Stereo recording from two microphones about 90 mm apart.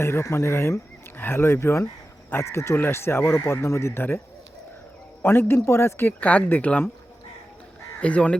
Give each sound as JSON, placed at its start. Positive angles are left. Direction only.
{"t": 0.0, "sound": "speech", "side_deg": 30}
{"t": 5.2, "sound": "speech", "side_deg": 25}
{"t": 8.0, "sound": "speech", "side_deg": 15}